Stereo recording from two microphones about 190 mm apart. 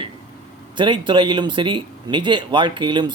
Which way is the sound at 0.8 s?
25° right (ahead or behind).